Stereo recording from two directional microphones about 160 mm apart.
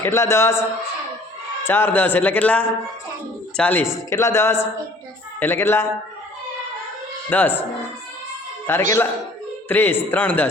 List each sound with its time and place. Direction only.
0.0 s a man's voice: 15° left (ahead or behind)
1.6 s a man's voice: 15° left (ahead or behind)
7.3 s a man's voice: 10° left (ahead or behind)
8.7 s a man's voice: 15° left (ahead or behind)